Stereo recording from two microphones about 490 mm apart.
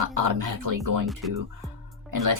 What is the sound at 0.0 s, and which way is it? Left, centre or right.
Speech, right.